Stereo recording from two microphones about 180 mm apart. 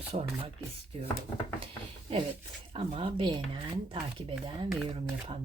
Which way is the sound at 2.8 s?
30° right (ahead or behind).